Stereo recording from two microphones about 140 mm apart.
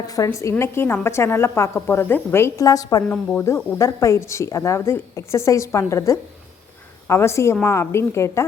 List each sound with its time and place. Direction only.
0.1 s speech: 25° left (ahead or behind)